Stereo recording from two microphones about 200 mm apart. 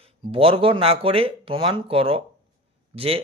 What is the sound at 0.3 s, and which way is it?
Speech, 30° right (ahead or behind).